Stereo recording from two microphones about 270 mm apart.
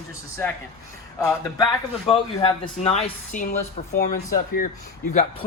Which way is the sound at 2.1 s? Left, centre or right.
Centre.